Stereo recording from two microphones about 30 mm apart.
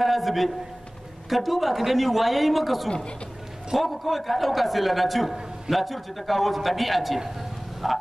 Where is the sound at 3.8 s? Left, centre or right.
Centre.